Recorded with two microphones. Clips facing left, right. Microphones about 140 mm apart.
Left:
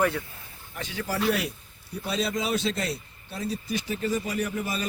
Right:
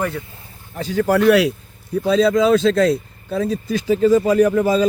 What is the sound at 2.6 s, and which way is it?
Speech, 90° right.